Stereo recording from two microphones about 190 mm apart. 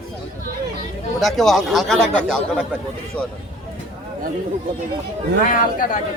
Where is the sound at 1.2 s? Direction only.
Centre (ahead or behind).